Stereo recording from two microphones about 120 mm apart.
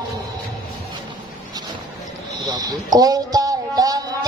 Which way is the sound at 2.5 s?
35° right (ahead or behind).